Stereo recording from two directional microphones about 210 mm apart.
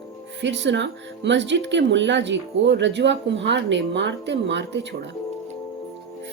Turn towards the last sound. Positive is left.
turn(degrees=-55)  # may be behind; listen again after turning